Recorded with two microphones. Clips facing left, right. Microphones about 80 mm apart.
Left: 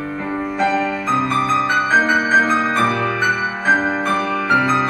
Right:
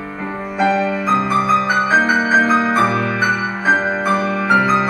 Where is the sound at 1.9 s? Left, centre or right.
Centre.